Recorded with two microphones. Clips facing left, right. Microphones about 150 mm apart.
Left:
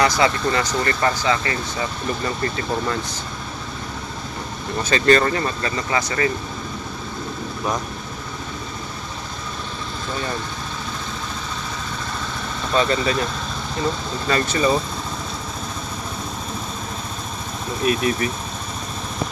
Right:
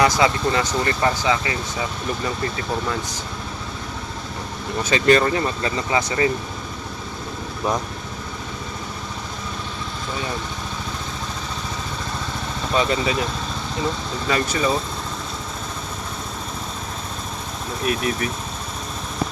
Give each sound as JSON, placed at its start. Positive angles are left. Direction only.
{"t": 0.2, "sound": "speech", "side_deg": -20}
{"t": 4.8, "sound": "speech", "side_deg": -15}
{"t": 12.7, "sound": "speech", "side_deg": -10}
{"t": 14.3, "sound": "speech", "side_deg": -10}
{"t": 17.8, "sound": "speech", "side_deg": 0}